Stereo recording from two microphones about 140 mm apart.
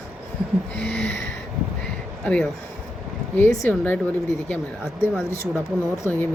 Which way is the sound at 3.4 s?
15° left (ahead or behind).